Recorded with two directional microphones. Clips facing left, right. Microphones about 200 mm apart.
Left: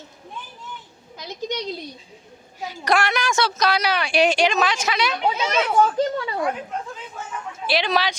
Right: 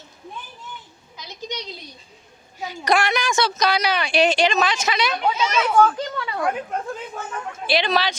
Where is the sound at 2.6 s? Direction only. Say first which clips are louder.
Right 1 dB; 5° left (ahead or behind).